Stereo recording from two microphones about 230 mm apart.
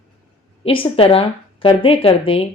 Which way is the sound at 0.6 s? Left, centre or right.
Left.